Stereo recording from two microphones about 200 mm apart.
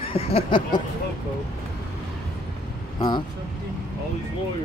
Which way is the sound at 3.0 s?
20° left (ahead or behind).